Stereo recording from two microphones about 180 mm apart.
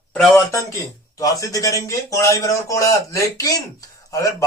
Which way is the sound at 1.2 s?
20° left (ahead or behind).